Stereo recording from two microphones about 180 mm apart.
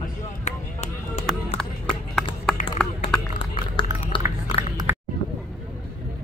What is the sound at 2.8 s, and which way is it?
Run, 5° left (ahead or behind).